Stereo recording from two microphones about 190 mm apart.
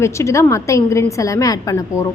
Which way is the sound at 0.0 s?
15° left (ahead or behind).